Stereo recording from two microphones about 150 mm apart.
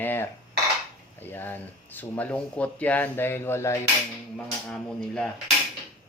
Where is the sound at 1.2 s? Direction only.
15° left (ahead or behind).